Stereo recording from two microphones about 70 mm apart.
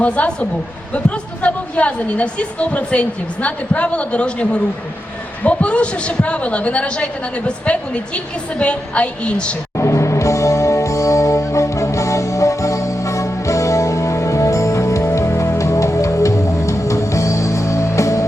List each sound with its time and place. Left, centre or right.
0.0 s a woman's voice: centre
9.7 s music: left